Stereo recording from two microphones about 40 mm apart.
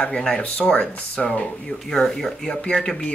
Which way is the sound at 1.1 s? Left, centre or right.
Left.